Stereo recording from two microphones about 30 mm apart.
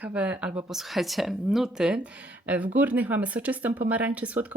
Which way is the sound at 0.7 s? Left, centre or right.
Centre.